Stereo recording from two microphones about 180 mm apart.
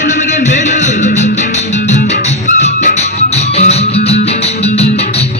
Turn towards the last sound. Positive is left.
turn(degrees=35)  # may be behind; listen again after turning